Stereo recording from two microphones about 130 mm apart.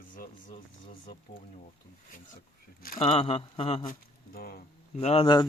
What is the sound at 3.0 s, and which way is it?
Speech, 45° left (ahead or behind).